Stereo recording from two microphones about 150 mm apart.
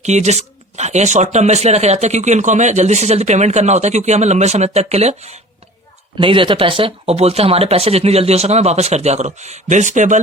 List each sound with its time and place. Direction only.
0.0 s speech: 50° right (ahead or behind)
6.1 s speech: 35° right (ahead or behind); by 10.2 s 55° right (ahead or behind)